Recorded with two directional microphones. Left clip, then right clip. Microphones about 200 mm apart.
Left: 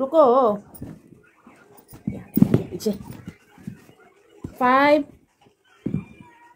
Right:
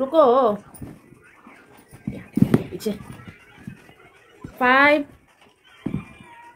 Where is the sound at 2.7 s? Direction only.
25° left (ahead or behind).